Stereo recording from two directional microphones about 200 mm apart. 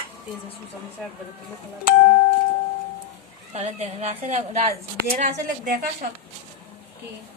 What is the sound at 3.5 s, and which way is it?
A woman's voice, 35° right (ahead or behind).